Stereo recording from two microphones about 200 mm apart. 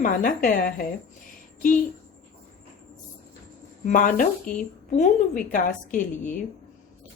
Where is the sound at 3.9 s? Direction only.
40° left (ahead or behind).